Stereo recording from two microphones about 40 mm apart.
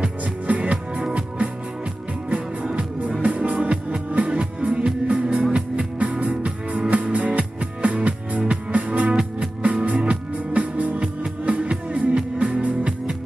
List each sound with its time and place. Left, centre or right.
0.0 s music: right
2.2 s music: right